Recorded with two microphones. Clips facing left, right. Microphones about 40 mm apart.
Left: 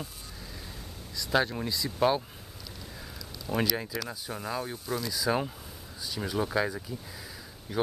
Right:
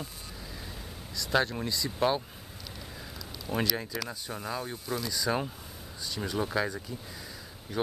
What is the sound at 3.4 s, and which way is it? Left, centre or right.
Speech, centre.